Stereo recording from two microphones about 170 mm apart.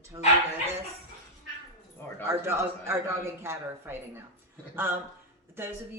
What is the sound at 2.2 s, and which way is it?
Speech, 15° right (ahead or behind).